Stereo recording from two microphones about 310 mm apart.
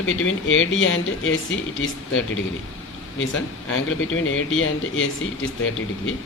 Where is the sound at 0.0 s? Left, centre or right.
Left.